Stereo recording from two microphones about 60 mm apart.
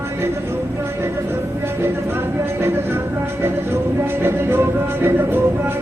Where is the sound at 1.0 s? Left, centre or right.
Right.